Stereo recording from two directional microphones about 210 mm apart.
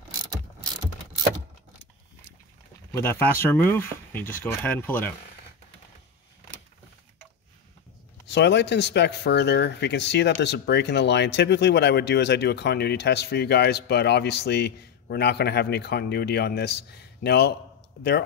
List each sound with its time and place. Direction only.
2.9 s speech: 10° left (ahead or behind)
8.3 s speech: 55° left (ahead or behind)